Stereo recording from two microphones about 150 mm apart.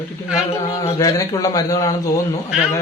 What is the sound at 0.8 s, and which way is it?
A man's voice, 25° left (ahead or behind).